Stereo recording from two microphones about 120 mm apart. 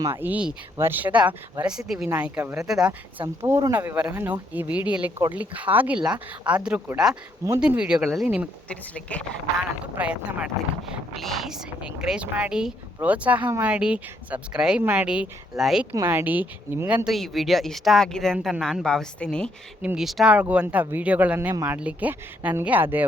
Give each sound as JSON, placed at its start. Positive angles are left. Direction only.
{"t": 0.1, "sound": "speech", "side_deg": -15}
{"t": 3.2, "sound": "speech", "side_deg": -20}
{"t": 9.0, "sound": "speech", "side_deg": 10}
{"t": 10.0, "sound": "speech", "side_deg": -10}
{"t": 15.9, "sound": "speech", "side_deg": -20}
{"t": 17.1, "sound": "speech", "side_deg": 0}
{"t": 19.8, "sound": "speech", "side_deg": -5}